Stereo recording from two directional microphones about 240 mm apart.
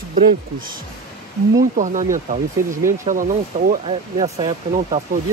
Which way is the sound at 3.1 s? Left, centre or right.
Right.